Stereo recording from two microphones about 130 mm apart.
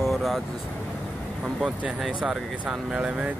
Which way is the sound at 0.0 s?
Centre (ahead or behind).